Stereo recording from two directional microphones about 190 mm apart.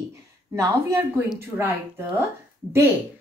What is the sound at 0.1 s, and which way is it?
Speech, 15° right (ahead or behind).